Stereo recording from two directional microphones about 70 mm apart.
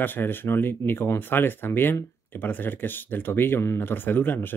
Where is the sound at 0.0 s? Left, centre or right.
Left.